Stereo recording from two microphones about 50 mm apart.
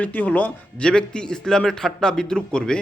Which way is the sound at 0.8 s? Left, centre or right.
Centre.